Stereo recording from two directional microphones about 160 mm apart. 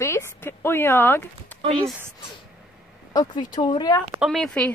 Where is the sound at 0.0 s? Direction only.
15° left (ahead or behind).